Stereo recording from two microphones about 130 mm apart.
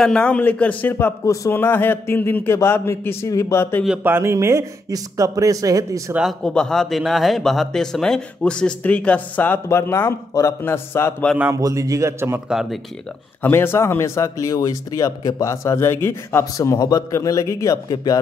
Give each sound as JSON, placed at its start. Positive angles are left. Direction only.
{"t": 0.0, "sound": "speech", "side_deg": 10}
{"t": 4.0, "sound": "speech", "side_deg": -20}
{"t": 6.4, "sound": "speech", "side_deg": 5}
{"t": 11.5, "sound": "speech", "side_deg": -25}
{"t": 12.4, "sound": "speech", "side_deg": -5}
{"t": 13.4, "sound": "speech", "side_deg": 15}